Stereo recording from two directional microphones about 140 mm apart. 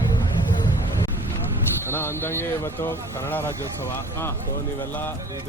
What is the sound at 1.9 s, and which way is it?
Speech, 15° left (ahead or behind).